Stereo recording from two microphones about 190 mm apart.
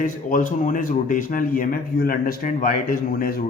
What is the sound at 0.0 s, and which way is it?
Speech, 45° left (ahead or behind).